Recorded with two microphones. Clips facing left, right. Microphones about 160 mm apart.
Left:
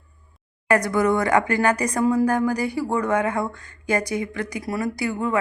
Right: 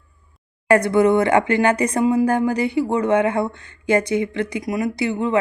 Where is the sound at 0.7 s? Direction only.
25° right (ahead or behind).